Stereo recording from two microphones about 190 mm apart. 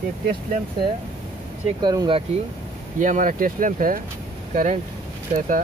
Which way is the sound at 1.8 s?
20° right (ahead or behind).